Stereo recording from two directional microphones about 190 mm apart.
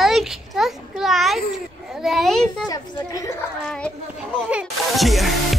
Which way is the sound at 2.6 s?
20° left (ahead or behind).